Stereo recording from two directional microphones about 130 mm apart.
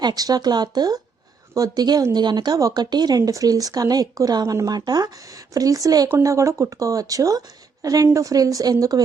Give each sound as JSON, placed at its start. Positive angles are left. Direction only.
{"t": 0.0, "sound": "speech", "side_deg": -30}